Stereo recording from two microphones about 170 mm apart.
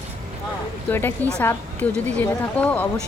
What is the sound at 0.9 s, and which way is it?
Speech, 10° left (ahead or behind).